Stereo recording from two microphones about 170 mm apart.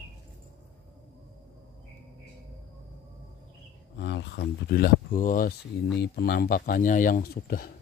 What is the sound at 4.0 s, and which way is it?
Speech, 90° left.